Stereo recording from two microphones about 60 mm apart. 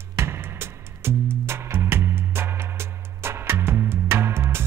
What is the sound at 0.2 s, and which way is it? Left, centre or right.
Music, right.